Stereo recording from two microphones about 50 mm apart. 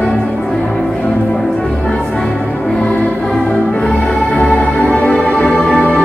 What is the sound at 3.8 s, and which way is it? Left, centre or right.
Music, centre.